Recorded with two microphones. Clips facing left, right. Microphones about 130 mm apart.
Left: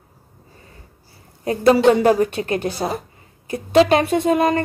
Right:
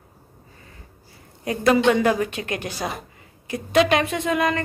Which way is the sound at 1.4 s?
30° left (ahead or behind).